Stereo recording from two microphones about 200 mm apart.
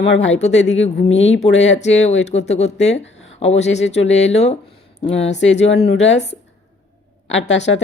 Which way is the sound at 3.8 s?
65° left (ahead or behind).